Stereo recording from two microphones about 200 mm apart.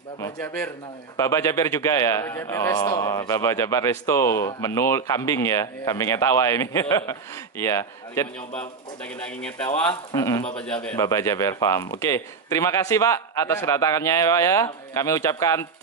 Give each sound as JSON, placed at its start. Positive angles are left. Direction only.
{"t": 0.2, "sound": "a man's voice", "side_deg": 10}
{"t": 10.1, "sound": "a man's voice", "side_deg": 20}
{"t": 10.7, "sound": "a man's voice", "side_deg": 5}
{"t": 11.0, "sound": "a man's voice", "side_deg": 15}